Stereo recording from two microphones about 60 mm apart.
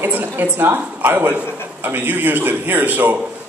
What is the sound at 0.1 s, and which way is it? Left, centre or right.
A man's voice, right.